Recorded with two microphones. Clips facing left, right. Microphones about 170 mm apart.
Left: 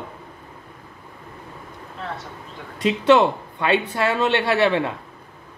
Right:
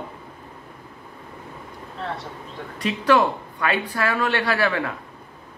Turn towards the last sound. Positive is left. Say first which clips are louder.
# left 4 dB
turn(degrees=25)  # may be behind; listen again after turning